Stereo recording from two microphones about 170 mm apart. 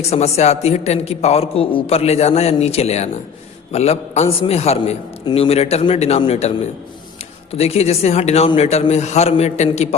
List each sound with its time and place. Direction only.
0.0 s a man's voice: 40° left (ahead or behind)
7.5 s a man's voice: 35° left (ahead or behind)